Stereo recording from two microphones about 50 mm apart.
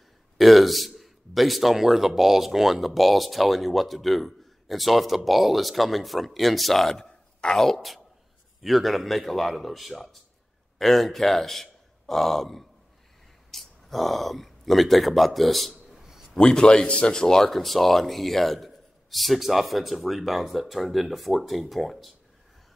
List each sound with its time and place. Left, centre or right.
0.4 s a man's voice: centre
16.0 s a sound: centre
16.3 s a man's voice: centre